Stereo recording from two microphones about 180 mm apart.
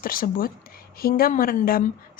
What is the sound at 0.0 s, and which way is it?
Speech, 55° left (ahead or behind).